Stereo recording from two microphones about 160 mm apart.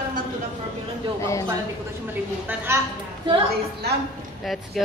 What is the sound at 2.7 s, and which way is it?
Speech, 15° right (ahead or behind).